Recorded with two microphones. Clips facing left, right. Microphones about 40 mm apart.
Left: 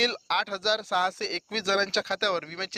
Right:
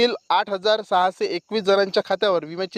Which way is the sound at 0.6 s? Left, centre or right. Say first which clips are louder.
Right 7 dB; right.